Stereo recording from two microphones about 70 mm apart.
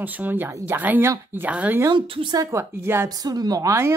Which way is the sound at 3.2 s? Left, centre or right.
Right.